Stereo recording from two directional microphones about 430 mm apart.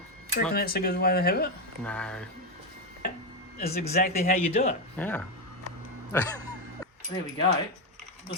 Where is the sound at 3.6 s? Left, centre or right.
Left.